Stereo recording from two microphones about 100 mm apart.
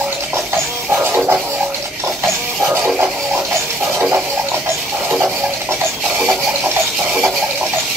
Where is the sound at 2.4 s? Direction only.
15° right (ahead or behind).